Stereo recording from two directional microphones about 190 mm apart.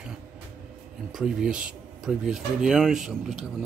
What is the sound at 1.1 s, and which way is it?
Speech, 5° right (ahead or behind).